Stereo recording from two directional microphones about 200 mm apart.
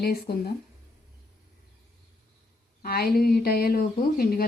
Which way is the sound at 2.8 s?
50° left (ahead or behind).